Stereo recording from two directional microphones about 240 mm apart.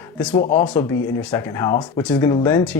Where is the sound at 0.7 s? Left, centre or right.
Centre.